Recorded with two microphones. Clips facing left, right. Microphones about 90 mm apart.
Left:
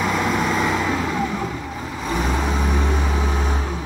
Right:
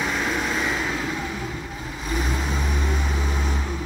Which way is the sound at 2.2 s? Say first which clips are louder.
Left 5 dB; 70° left (ahead or behind).